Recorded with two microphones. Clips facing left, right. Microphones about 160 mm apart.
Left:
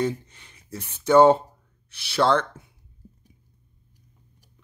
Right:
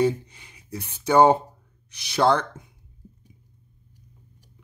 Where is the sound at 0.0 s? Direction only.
10° right (ahead or behind).